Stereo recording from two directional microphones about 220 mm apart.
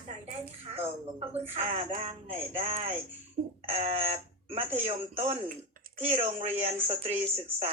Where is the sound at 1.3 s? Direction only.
30° right (ahead or behind).